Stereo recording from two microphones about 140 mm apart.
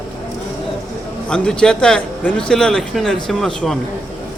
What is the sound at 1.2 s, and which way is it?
Speech, 5° left (ahead or behind).